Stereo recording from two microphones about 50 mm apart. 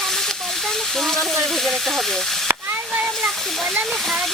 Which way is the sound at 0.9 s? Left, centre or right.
Centre.